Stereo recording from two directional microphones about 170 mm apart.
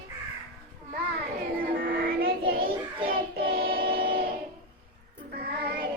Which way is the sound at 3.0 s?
65° right (ahead or behind).